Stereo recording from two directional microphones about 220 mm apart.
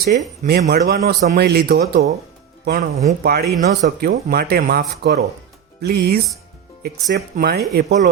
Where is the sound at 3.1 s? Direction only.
45° right (ahead or behind).